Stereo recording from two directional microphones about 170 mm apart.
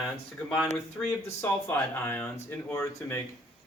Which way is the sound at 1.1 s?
15° left (ahead or behind).